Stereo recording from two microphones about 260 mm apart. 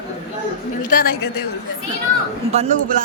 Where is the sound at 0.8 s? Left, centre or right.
Left.